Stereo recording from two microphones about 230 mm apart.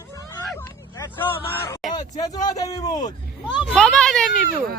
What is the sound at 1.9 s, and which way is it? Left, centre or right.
Speech, centre.